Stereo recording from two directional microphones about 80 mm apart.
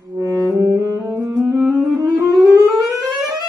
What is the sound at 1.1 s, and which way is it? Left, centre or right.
Music, right.